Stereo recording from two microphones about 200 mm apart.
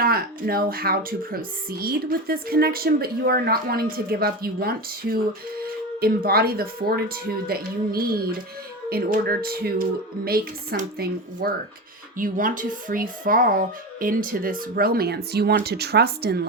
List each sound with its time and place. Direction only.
0.0 s speech: 50° right (ahead or behind)